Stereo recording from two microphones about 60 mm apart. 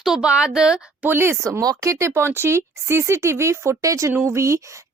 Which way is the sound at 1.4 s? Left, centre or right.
Right.